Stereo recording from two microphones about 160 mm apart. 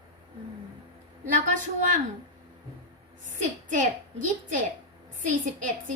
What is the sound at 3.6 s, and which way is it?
Speech, 50° right (ahead or behind).